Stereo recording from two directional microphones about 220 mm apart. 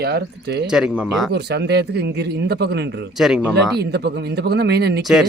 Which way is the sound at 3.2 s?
5° right (ahead or behind).